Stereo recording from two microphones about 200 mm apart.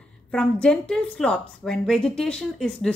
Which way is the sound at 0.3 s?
5° left (ahead or behind).